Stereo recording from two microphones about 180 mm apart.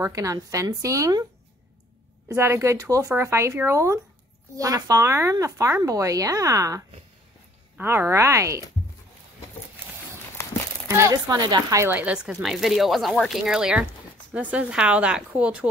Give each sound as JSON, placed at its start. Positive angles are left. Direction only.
{"t": 0.0, "sound": "speech", "side_deg": -20}
{"t": 2.2, "sound": "speech", "side_deg": -15}
{"t": 10.9, "sound": "speech", "side_deg": -15}